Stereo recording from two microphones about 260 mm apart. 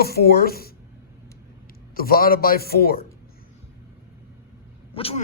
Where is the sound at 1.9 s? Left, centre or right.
Left.